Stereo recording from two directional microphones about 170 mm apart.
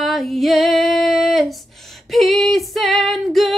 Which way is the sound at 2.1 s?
Centre (ahead or behind).